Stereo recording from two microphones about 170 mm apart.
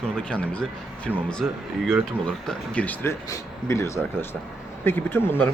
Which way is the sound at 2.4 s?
5° left (ahead or behind).